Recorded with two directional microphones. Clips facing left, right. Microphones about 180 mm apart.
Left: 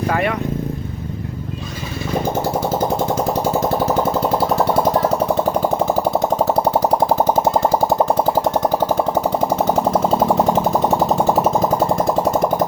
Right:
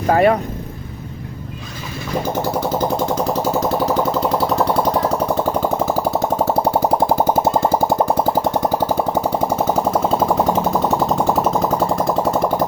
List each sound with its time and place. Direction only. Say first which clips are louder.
0.1 s speech: right 8 dB; 35° right (ahead or behind)